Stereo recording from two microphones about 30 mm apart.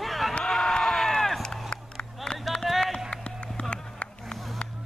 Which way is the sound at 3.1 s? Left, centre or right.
Left.